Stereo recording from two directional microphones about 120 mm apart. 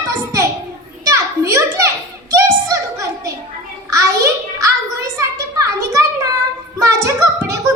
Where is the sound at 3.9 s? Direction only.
30° right (ahead or behind).